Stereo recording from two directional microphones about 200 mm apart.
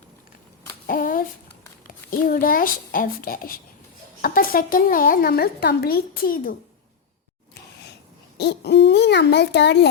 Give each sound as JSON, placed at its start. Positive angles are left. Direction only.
{"t": 0.9, "sound": "a sound", "side_deg": 45}
{"t": 2.0, "sound": "a woman's voice", "side_deg": 45}
{"t": 8.4, "sound": "a child's voice", "side_deg": 55}